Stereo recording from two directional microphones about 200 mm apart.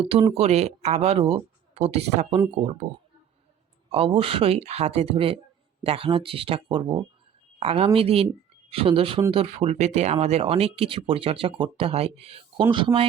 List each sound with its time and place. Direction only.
0.0 s speech: 25° right (ahead or behind)
3.8 s speech: 30° right (ahead or behind)